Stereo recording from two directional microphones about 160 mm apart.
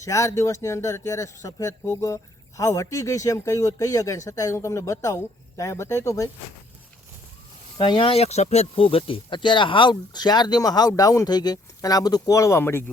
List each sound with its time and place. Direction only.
0.0 s speech: 20° left (ahead or behind)
7.8 s speech: 35° left (ahead or behind); by 12.8 s 15° left (ahead or behind)